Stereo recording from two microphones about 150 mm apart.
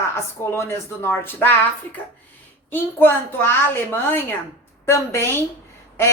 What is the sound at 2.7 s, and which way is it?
Speech, 15° left (ahead or behind).